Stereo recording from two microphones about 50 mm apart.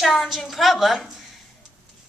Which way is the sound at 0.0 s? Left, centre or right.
Centre.